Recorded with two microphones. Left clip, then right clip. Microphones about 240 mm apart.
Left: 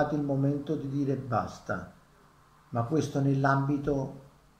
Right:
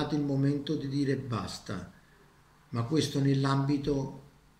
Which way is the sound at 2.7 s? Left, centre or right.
Centre.